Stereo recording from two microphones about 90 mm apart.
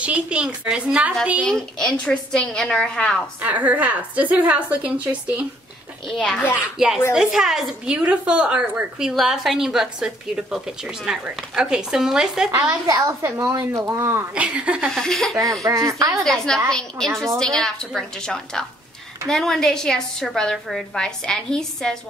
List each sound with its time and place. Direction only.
0.0 s a woman's voice: 10° right (ahead or behind)
1.5 s a woman's voice: 5° left (ahead or behind)
3.4 s a woman's voice: 15° right (ahead or behind)
6.0 s speech: 5° left (ahead or behind)
6.5 s a woman's voice: 10° right (ahead or behind)
12.8 s speech: 40° right (ahead or behind)
13.2 s speech: 30° right (ahead or behind)
14.3 s a woman's voice: 15° right (ahead or behind)
14.9 s a woman's voice: 5° left (ahead or behind)
15.6 s speech: 35° right (ahead or behind)
16.3 s a woman's voice: 5° left (ahead or behind)